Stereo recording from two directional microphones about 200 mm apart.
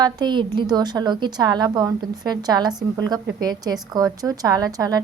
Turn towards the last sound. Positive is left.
turn(degrees=-20)  # may be behind; listen again after turning